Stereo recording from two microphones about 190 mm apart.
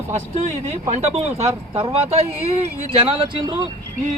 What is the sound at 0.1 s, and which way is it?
Speech, 35° right (ahead or behind).